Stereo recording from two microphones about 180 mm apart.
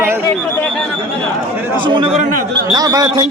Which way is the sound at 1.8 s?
30° right (ahead or behind).